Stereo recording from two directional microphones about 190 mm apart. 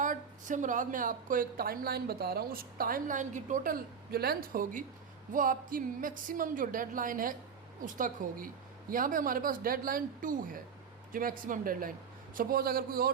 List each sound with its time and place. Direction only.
0.0 s a woman's voice: 45° right (ahead or behind)